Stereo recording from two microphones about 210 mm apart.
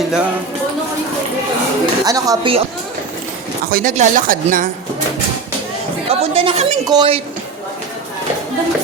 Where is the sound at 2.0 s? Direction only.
15° right (ahead or behind).